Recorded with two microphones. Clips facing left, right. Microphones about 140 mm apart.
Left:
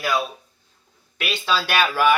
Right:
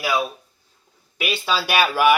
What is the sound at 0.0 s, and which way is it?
Speech, 5° right (ahead or behind).